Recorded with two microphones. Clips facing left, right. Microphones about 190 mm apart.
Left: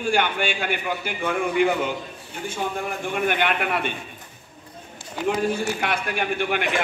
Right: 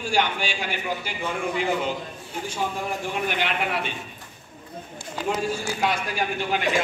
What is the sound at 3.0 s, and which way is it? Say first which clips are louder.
Speech: left 6 dB; 55° left (ahead or behind).